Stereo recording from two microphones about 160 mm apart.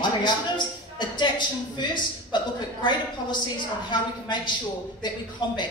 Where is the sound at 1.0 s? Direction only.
30° left (ahead or behind).